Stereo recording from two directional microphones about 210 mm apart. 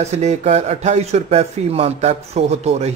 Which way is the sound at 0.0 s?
30° right (ahead or behind).